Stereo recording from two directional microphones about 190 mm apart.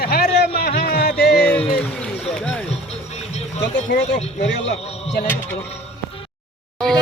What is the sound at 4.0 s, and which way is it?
Speech, 40° left (ahead or behind).